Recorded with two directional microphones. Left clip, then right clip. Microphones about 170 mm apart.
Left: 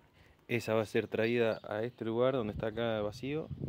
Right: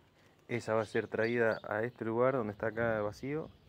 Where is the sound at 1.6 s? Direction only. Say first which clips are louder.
Right 1 dB; 10° left (ahead or behind).